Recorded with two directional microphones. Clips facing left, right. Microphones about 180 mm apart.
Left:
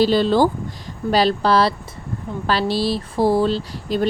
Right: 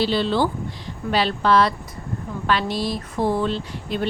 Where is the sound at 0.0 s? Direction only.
40° left (ahead or behind).